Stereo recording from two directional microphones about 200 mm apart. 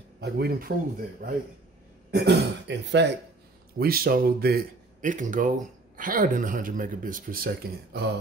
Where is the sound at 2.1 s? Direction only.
55° right (ahead or behind).